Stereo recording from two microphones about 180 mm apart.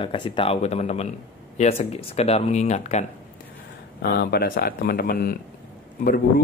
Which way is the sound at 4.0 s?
60° left (ahead or behind).